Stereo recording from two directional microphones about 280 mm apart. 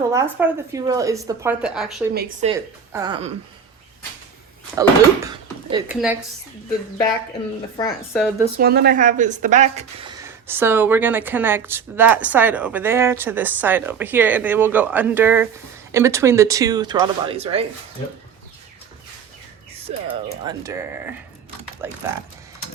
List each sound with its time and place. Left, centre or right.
0.1 s speech: centre
2.4 s speech: centre
4.8 s a woman's voice: centre
7.8 s speech: centre
8.5 s speech: right
20.1 s speech: centre